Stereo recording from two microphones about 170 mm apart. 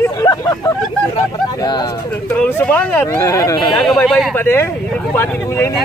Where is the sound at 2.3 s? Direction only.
15° left (ahead or behind).